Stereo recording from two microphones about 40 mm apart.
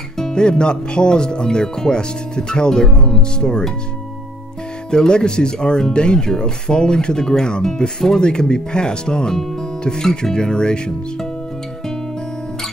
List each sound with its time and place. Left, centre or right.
0.2 s speech: left
4.9 s speech: left